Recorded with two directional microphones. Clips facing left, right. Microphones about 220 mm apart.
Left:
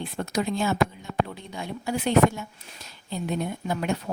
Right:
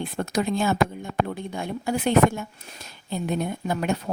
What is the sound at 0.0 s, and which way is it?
A woman's voice, 50° right (ahead or behind).